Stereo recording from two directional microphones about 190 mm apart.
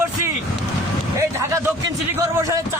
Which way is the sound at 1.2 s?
15° right (ahead or behind).